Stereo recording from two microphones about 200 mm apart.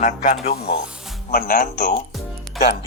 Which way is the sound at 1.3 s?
50° left (ahead or behind).